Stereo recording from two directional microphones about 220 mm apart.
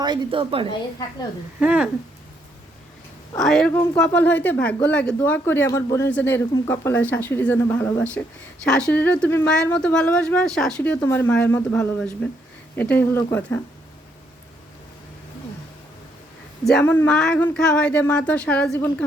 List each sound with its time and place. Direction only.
0.0 s speech: 20° right (ahead or behind)
1.5 s speech: 5° right (ahead or behind)
3.3 s speech: centre (ahead or behind)
16.6 s speech: 5° left (ahead or behind)